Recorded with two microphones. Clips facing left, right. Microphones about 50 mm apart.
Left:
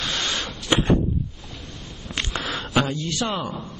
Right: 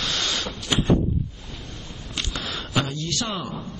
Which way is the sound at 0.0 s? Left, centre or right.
Left.